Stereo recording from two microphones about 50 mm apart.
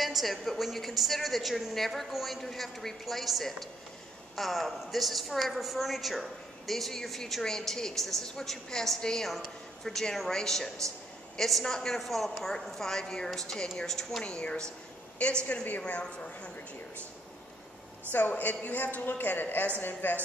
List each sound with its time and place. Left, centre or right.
0.0 s a sound: centre
0.5 s a woman's voice: centre
14.2 s a woman's voice: centre
18.4 s a man's voice: left